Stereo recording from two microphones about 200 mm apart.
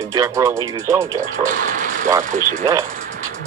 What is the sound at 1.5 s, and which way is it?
Speech, 40° right (ahead or behind).